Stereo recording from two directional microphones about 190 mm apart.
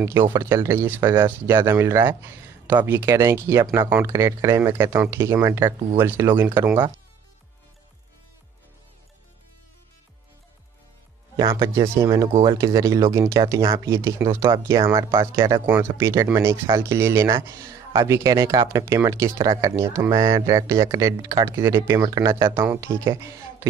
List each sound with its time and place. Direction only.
0.2 s speech: 15° right (ahead or behind)
11.3 s speech: 20° right (ahead or behind)
15.6 s speech: 10° right (ahead or behind)